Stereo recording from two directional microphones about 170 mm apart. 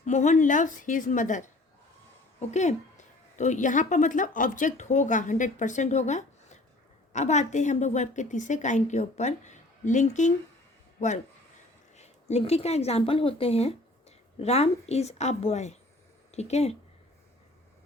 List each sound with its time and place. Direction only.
0.0 s a woman's voice: 45° left (ahead or behind)